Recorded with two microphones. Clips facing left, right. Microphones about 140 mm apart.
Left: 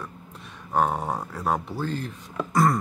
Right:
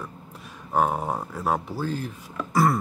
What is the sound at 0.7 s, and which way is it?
Speech, 5° right (ahead or behind).